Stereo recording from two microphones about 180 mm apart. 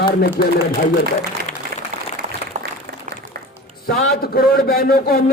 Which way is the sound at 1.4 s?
60° right (ahead or behind).